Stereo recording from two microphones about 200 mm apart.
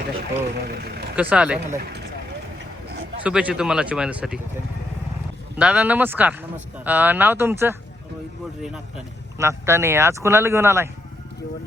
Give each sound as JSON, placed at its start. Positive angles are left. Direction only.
{"t": 0.6, "sound": "speech", "side_deg": -55}
{"t": 1.1, "sound": "speech", "side_deg": -5}
{"t": 3.2, "sound": "speech", "side_deg": -5}
{"t": 5.5, "sound": "speech", "side_deg": -5}
{"t": 9.4, "sound": "speech", "side_deg": -15}